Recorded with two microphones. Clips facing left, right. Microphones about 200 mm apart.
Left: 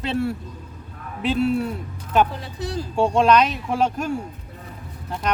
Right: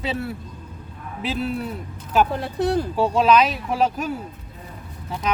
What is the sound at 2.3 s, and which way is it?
Speech, 60° right (ahead or behind).